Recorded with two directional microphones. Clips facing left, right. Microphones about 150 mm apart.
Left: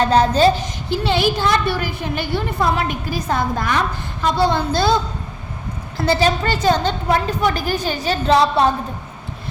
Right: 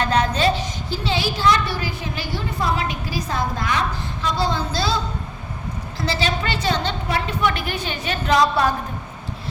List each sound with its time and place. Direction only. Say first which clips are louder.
0.0 s a woman's voice: left 6 dB; 35° left (ahead or behind)
0.9 s a woman's voice: left 7 dB; 60° left (ahead or behind)
6.1 s a woman's voice: left 7 dB; 45° left (ahead or behind); by 8.7 s 30° left (ahead or behind)